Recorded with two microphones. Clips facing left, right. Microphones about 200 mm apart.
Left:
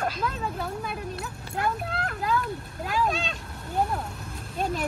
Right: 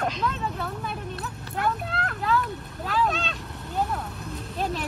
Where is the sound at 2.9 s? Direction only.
Centre (ahead or behind).